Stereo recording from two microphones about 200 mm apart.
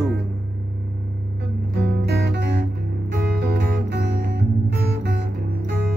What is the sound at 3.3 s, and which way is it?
Music, 55° right (ahead or behind).